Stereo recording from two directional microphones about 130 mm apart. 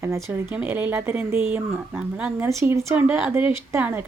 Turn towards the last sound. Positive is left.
turn(degrees=-15)  # may be behind; listen again after turning